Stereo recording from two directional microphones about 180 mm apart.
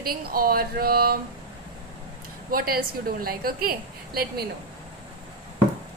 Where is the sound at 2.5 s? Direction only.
55° right (ahead or behind).